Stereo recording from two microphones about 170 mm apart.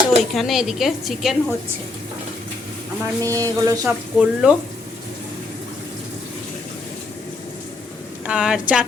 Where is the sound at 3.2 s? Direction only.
20° right (ahead or behind).